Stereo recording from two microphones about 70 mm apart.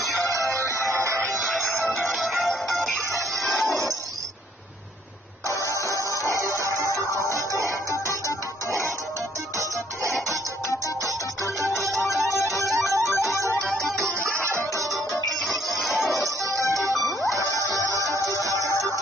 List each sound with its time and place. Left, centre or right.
0.2 s music: right
1.4 s music: centre
5.7 s music: left
7.9 s music: left
10.7 s music: left
12.6 s music: centre
14.2 s music: right
14.8 s music: centre
16.4 s music: right
16.9 s music: centre
17.6 s music: left